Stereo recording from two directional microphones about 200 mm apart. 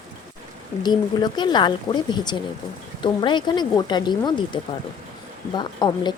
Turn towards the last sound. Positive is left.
turn(degrees=20)  # may be behind; listen again after turning